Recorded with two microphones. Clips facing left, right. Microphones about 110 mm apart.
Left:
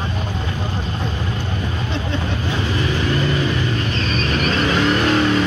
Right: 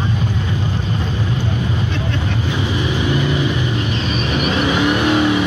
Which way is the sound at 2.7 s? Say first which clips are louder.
Right 1 dB; 15° right (ahead or behind).